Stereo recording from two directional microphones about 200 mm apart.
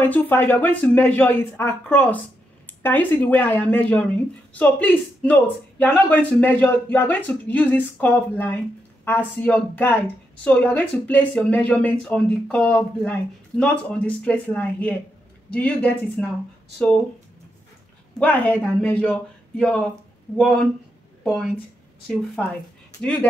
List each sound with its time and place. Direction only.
0.0 s speech: 10° left (ahead or behind)
18.2 s speech: 5° left (ahead or behind)
21.2 s speech: centre (ahead or behind)